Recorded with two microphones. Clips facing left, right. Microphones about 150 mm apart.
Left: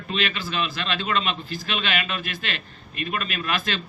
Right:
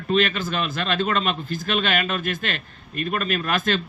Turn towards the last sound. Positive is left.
turn(degrees=-45)  # may be behind; listen again after turning